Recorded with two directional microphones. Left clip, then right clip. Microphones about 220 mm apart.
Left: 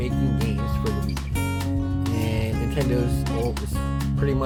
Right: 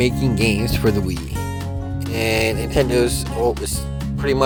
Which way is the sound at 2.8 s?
50° right (ahead or behind).